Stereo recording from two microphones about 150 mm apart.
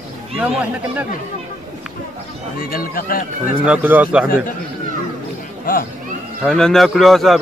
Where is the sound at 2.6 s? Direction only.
75° left (ahead or behind).